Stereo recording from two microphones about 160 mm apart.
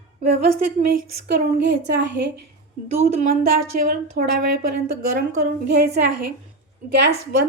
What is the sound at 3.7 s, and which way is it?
Speech, 70° right (ahead or behind).